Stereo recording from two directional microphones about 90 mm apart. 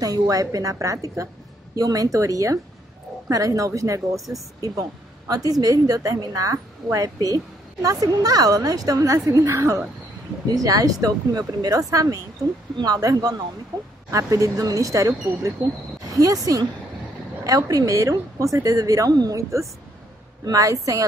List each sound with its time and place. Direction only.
0.0 s a woman's voice: 45° right (ahead or behind)